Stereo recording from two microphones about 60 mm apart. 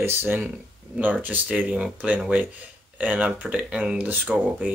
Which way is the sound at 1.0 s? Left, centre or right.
Right.